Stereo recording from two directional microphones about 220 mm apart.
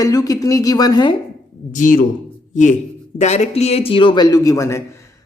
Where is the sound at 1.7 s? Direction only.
35° left (ahead or behind).